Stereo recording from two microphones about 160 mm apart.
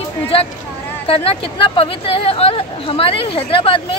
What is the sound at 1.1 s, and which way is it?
A woman's voice, 35° left (ahead or behind).